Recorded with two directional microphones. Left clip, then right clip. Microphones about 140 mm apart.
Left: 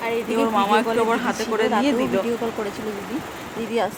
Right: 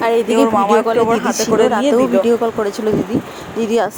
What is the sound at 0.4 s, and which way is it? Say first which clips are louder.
A man's voice: right 6 dB; 35° right (ahead or behind).